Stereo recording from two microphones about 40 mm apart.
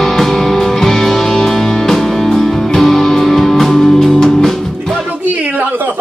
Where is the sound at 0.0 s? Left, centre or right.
Centre.